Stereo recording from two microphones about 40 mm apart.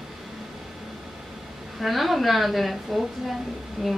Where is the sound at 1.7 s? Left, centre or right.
Centre.